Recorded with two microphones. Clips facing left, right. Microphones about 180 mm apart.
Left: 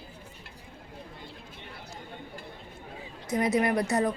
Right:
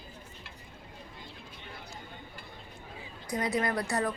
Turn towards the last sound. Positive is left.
turn(degrees=20)  # may be behind; listen again after turning